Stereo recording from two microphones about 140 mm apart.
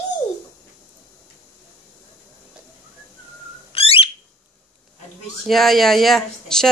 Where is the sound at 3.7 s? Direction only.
45° left (ahead or behind).